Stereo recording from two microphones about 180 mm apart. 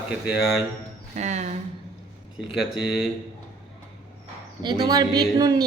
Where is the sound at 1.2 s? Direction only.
40° right (ahead or behind).